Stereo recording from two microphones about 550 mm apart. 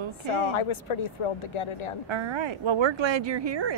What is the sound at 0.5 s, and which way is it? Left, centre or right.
A woman's voice, left.